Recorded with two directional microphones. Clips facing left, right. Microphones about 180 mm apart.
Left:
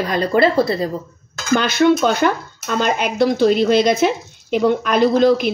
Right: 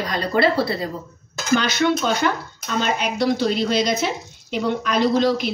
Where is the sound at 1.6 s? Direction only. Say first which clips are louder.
Left 6 dB; 50° left (ahead or behind).